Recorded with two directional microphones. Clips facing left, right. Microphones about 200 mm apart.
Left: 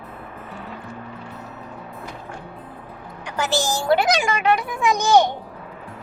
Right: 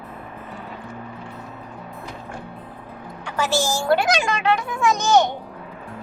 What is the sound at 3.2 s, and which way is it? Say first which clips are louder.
A child's voice: right 1 dB; 15° left (ahead or behind).